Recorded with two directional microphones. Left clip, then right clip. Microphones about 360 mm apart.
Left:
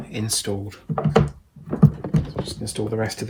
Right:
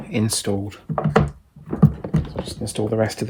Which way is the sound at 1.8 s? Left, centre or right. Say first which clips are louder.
Even; centre.